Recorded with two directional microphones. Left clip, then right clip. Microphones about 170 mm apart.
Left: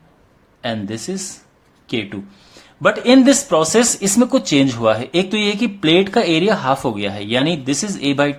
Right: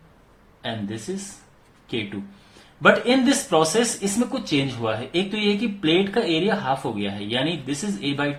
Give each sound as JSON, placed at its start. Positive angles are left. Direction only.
{"t": 1.1, "sound": "speech", "side_deg": 85}
{"t": 2.8, "sound": "speech", "side_deg": 60}